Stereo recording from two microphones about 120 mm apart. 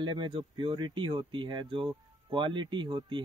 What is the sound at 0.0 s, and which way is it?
Speech, 40° right (ahead or behind).